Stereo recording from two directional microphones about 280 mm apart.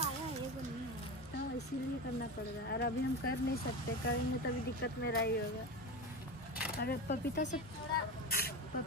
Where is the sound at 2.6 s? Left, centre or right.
Left.